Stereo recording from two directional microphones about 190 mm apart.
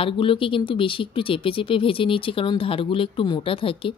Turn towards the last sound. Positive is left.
turn(degrees=30)  # may be behind; listen again after turning